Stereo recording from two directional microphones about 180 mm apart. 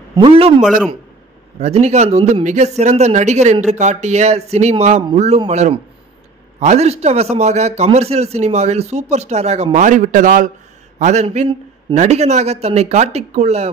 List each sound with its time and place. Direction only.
0.1 s a man's voice: 25° right (ahead or behind)
0.6 s speech: centre (ahead or behind)
1.6 s a man's voice: 35° right (ahead or behind)